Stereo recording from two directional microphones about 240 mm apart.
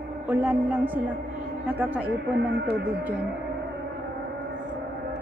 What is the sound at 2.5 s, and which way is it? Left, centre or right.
Speech, right.